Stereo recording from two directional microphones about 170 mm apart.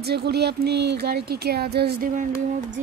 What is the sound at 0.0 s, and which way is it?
Speech, 70° right (ahead or behind).